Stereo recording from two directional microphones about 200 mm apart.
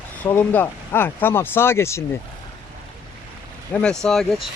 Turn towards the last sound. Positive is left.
turn(degrees=0)  # may be behind; listen again after turning